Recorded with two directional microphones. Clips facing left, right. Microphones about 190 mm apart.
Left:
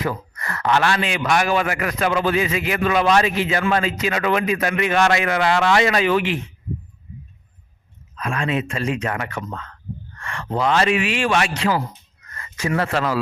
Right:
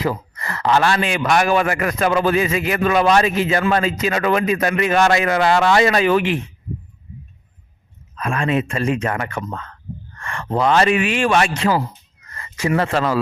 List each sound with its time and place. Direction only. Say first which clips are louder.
0.0 s a man's voice: right 3 dB; 30° right (ahead or behind); by 6.4 s 50° right (ahead or behind)
8.1 s a man's voice: right 3 dB; 50° right (ahead or behind)
12.3 s a man's voice: right 3 dB; 30° right (ahead or behind)